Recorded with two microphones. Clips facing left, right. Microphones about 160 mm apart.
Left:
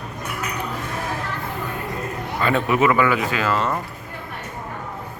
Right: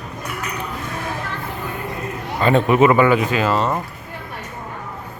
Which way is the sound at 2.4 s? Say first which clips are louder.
Right 5 dB; 25° right (ahead or behind).